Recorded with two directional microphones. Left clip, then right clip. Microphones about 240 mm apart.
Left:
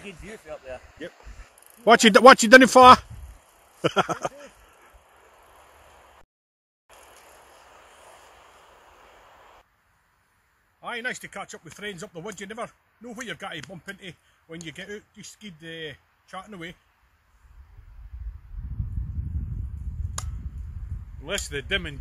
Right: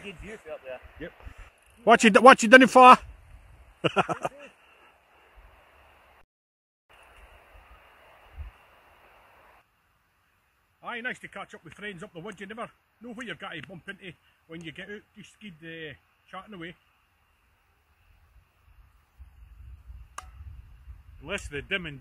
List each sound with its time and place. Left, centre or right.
0.0 s a man's voice: centre
1.0 s speech: left
1.9 s speech: centre
10.8 s speech: centre
21.2 s a man's voice: centre